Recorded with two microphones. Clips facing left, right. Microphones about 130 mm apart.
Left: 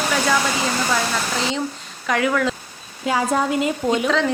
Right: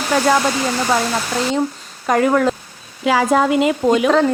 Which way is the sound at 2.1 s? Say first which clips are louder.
Right 5 dB; 45° right (ahead or behind).